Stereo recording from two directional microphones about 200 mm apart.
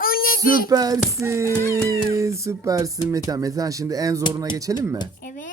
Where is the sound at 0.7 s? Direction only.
20° right (ahead or behind).